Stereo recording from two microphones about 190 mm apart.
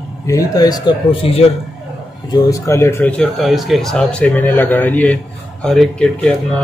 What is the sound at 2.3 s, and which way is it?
Speech, 15° left (ahead or behind).